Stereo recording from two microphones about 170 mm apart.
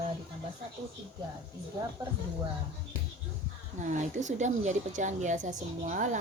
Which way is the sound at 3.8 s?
45° right (ahead or behind).